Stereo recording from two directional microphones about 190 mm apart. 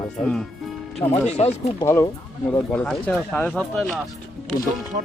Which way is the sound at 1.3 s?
35° left (ahead or behind).